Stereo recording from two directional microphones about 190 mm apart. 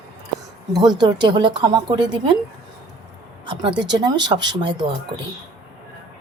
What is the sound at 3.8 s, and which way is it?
Speech, 20° right (ahead or behind).